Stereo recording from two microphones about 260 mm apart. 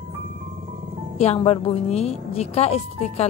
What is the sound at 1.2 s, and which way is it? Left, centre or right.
A woman's voice, left.